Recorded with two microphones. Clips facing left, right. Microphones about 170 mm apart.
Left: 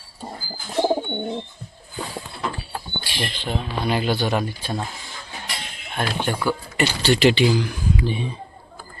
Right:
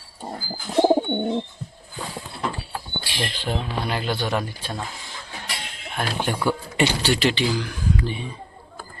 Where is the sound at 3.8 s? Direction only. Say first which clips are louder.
Left 7 dB; 5° left (ahead or behind).